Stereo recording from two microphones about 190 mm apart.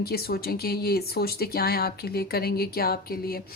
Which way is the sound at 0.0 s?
55° left (ahead or behind).